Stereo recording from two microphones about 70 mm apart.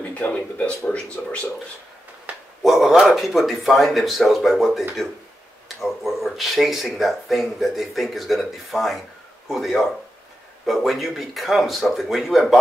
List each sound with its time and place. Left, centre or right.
0.2 s speech: centre
2.6 s speech: centre